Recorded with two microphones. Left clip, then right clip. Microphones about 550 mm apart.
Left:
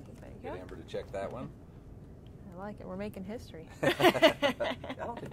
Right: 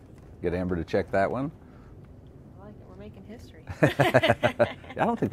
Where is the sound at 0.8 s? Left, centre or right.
Right.